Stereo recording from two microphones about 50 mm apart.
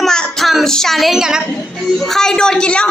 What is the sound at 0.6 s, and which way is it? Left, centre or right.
Speech, centre.